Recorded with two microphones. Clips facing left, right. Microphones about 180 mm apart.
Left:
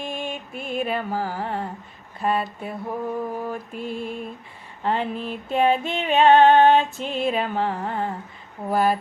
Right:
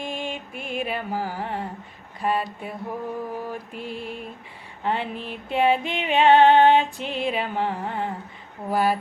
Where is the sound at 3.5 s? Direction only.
45° left (ahead or behind).